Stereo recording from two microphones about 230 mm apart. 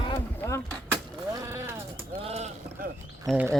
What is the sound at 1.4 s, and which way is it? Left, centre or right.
Sheep, centre.